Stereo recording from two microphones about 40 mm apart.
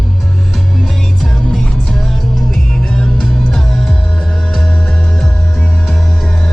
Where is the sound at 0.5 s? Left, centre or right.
Centre.